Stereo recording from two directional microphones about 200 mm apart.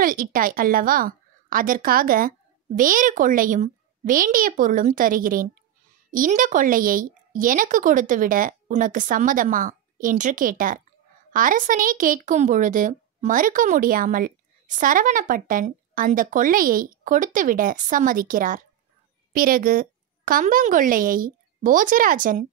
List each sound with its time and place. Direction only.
0.0 s a woman's voice: 45° right (ahead or behind)